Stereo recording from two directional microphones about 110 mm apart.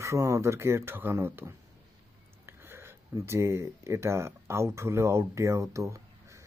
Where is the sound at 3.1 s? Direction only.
25° right (ahead or behind).